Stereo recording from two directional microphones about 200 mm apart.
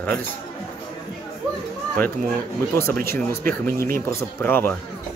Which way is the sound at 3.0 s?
15° left (ahead or behind).